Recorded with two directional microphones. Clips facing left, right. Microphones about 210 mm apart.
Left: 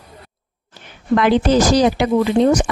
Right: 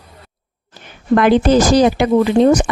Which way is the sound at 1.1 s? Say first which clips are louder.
Right 3 dB; 50° right (ahead or behind).